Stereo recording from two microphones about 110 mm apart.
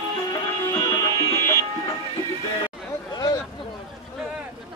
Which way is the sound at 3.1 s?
40° left (ahead or behind).